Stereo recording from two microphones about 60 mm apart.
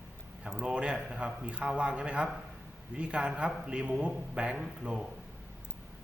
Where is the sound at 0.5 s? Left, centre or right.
Centre.